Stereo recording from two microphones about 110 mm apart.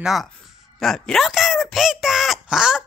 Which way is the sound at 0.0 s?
Centre (ahead or behind).